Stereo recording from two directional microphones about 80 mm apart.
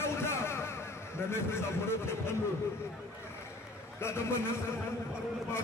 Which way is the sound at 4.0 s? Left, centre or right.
Left.